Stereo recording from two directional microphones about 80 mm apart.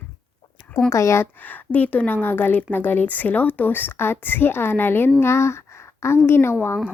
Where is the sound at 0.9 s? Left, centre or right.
Left.